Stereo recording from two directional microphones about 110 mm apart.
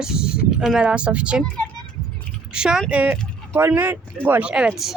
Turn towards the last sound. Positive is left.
turn(degrees=-5)  # may be behind; listen again after turning